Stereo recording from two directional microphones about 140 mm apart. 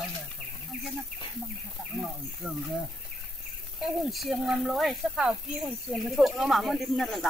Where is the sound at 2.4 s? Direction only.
5° right (ahead or behind).